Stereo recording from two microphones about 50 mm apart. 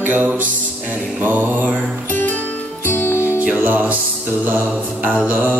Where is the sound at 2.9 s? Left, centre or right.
Left.